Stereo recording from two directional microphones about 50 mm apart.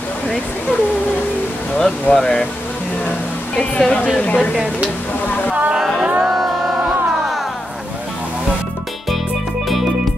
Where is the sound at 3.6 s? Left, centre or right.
Left.